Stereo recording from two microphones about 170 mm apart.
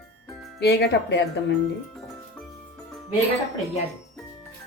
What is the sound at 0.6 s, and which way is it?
Speech, 75° left (ahead or behind).